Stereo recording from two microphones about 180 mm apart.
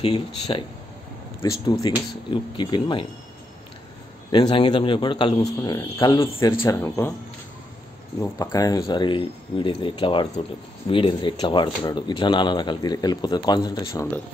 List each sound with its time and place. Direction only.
0.0 s speech: 30° left (ahead or behind)
1.4 s speech: 20° left (ahead or behind)
4.3 s speech: 25° left (ahead or behind)
8.2 s speech: 20° left (ahead or behind)